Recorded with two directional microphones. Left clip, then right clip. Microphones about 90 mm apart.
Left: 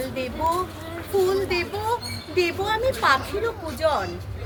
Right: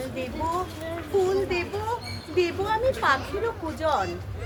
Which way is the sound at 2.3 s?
85° left.